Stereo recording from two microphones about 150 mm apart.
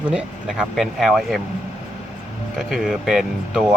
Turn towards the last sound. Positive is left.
turn(degrees=-5)  # may be behind; listen again after turning